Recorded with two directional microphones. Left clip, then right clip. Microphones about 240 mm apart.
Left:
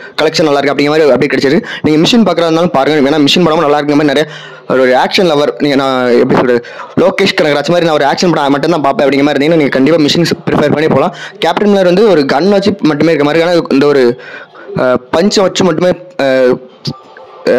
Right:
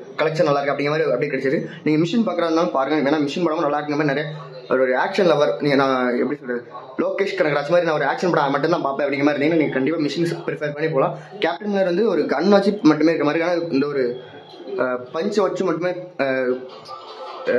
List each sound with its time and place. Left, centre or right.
0.1 s speech: left